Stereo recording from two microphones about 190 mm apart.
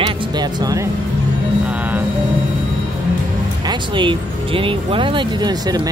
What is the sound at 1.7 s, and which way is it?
Music, 10° right (ahead or behind).